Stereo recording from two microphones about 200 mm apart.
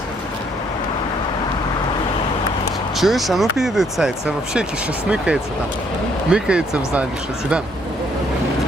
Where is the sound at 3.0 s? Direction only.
Centre (ahead or behind).